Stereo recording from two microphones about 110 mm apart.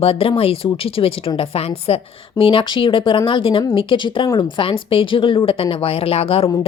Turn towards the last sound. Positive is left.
turn(degrees=60)  # may be behind; listen again after turning